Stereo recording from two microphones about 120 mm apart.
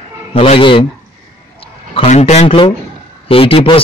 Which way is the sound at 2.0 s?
70° left (ahead or behind).